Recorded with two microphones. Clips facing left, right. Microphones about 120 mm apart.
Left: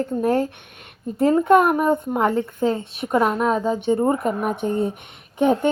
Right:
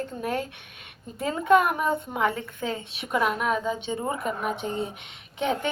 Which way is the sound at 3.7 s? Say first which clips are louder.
Left 10 dB; 50° left (ahead or behind).